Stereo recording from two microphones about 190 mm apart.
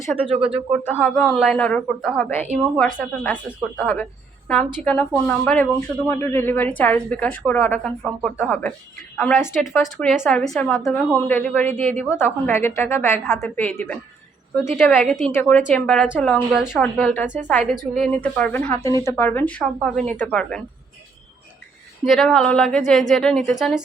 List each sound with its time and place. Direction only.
0.2 s speech: 30° right (ahead or behind)
0.9 s a woman's voice: 10° left (ahead or behind)
9.8 s a woman's voice: centre (ahead or behind)
22.0 s speech: centre (ahead or behind)